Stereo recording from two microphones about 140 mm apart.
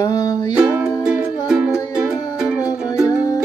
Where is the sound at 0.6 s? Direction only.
15° right (ahead or behind).